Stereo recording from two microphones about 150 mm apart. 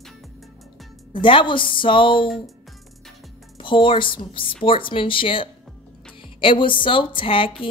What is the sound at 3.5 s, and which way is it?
A woman's voice, 35° left (ahead or behind).